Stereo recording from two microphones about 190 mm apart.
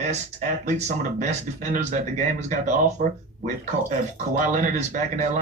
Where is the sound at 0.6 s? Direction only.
40° right (ahead or behind).